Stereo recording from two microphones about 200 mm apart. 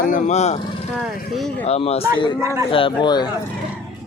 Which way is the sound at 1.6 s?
30° left (ahead or behind).